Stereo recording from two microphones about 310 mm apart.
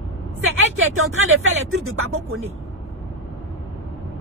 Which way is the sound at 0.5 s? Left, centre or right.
Right.